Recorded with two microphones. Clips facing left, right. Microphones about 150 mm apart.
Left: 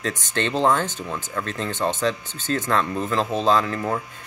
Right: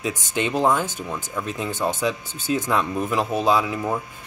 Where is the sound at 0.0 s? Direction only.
10° right (ahead or behind).